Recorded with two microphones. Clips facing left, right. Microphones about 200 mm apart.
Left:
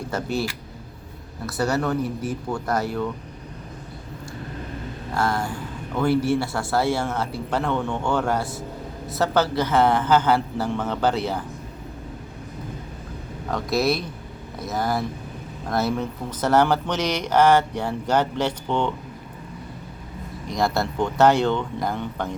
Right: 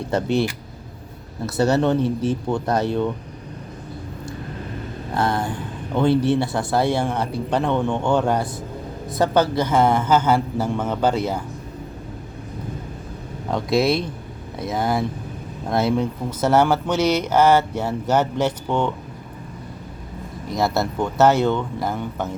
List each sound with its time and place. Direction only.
0.1 s speech: 20° right (ahead or behind)
5.1 s speech: 20° right (ahead or behind)
13.5 s speech: 25° right (ahead or behind)
16.0 s speech: 10° right (ahead or behind)
20.5 s speech: 5° right (ahead or behind)